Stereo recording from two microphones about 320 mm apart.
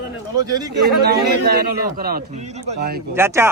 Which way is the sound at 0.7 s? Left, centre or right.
Right.